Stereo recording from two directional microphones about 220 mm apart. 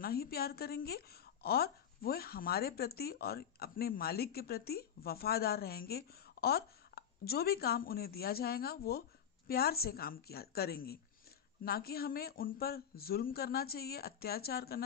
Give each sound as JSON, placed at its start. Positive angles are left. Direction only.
{"t": 0.0, "sound": "a woman's voice", "side_deg": 45}